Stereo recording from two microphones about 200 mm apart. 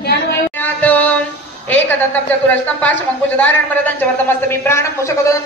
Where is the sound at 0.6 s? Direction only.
10° left (ahead or behind).